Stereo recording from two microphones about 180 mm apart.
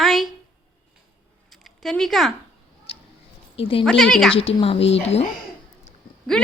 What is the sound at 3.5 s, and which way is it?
Speech, 30° left (ahead or behind).